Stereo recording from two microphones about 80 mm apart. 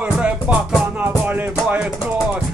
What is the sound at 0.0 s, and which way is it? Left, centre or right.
Music, centre.